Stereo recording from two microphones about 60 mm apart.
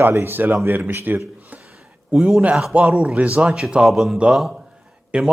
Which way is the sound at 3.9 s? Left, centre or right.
Centre.